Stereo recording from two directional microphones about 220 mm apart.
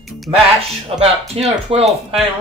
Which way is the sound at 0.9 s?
25° right (ahead or behind).